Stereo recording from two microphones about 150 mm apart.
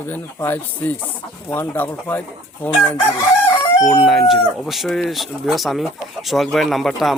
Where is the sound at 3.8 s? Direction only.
Centre (ahead or behind).